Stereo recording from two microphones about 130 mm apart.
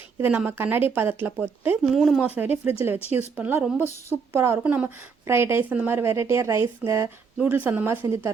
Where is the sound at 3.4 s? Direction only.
15° right (ahead or behind).